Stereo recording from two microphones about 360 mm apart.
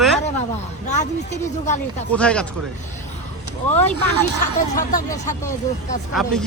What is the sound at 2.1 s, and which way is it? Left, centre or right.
Speech, centre.